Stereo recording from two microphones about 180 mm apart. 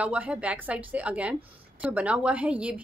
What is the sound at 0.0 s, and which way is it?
A woman's voice, 5° right (ahead or behind).